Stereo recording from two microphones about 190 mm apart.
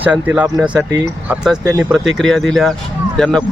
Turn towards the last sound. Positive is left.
turn(degrees=5)  # may be behind; listen again after turning